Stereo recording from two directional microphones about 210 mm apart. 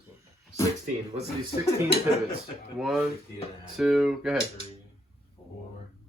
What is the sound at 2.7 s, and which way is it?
Speech, centre (ahead or behind).